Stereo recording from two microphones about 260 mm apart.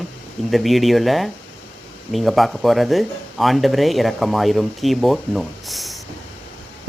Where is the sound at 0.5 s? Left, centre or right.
Centre.